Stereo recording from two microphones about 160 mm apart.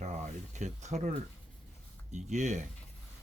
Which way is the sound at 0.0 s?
45° right (ahead or behind).